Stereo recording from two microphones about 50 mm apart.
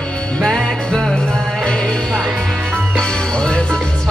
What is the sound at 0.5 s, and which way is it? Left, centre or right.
Music, centre.